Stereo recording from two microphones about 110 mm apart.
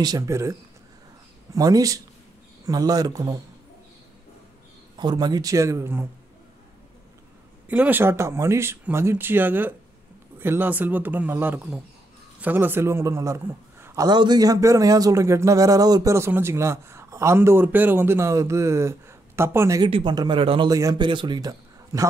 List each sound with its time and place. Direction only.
0.0 s speech: 30° right (ahead or behind)
4.9 s speech: 40° right (ahead or behind); by 6.0 s 25° right (ahead or behind)
7.6 s a man's voice: 15° right (ahead or behind)
14.0 s speech: 40° right (ahead or behind); by 19.8 s 25° right (ahead or behind)
19.9 s speech: 45° right (ahead or behind)
20.7 s speech: 35° right (ahead or behind)